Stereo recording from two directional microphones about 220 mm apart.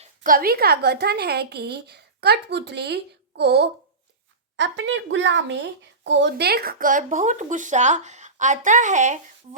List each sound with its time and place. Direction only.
0.0 s a woman's voice: 35° right (ahead or behind)